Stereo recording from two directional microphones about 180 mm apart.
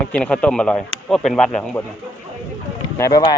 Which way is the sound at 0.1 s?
5° left (ahead or behind).